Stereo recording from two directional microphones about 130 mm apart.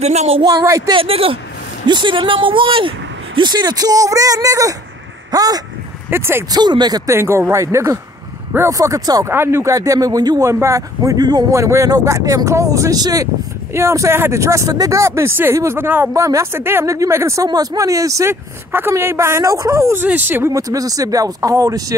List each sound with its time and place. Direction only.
0.0 s speech: 60° right (ahead or behind)
0.4 s speech: 30° right (ahead or behind)
0.9 s speech: 45° right (ahead or behind); by 5.6 s 30° right (ahead or behind)
6.0 s speech: 20° right (ahead or behind)
6.5 s speech: 35° right (ahead or behind)
7.2 s speech: 20° right (ahead or behind)